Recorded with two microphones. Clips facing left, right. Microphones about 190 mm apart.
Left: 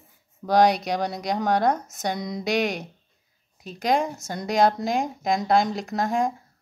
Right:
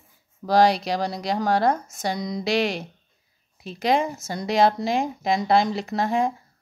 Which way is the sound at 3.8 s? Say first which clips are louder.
Right 1 dB; centre (ahead or behind).